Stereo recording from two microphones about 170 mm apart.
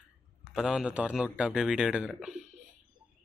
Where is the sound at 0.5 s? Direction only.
5° right (ahead or behind).